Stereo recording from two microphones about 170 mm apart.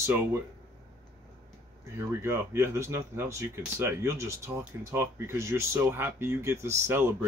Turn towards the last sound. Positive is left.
turn(degrees=-15)  # may be behind; listen again after turning